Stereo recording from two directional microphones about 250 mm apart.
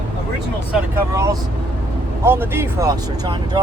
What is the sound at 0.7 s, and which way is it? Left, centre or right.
Speech, centre.